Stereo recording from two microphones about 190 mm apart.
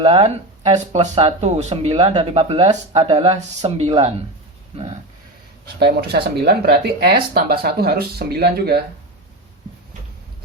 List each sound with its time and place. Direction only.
0.0 s speech: 30° right (ahead or behind)
5.8 s speech: 55° right (ahead or behind)